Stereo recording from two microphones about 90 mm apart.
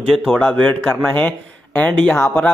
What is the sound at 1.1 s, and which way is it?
Speech, 20° left (ahead or behind).